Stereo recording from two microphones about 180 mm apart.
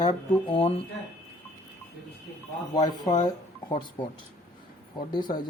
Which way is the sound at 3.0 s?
20° left (ahead or behind).